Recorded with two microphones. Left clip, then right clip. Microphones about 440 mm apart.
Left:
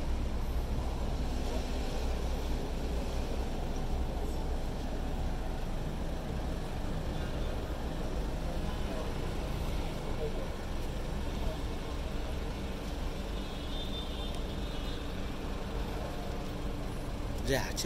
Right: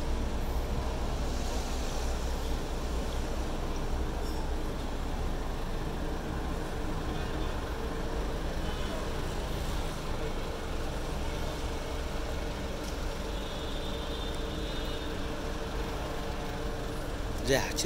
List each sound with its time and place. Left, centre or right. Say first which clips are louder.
17.5 s speech: right 5 dB; centre